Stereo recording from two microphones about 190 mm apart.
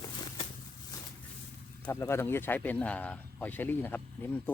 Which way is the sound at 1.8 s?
15° left (ahead or behind).